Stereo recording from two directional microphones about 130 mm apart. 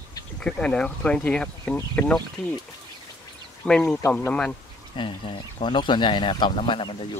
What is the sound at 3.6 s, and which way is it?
Speech, 10° left (ahead or behind).